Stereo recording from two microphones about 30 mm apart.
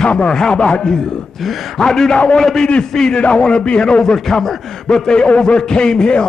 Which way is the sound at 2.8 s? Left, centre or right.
Left.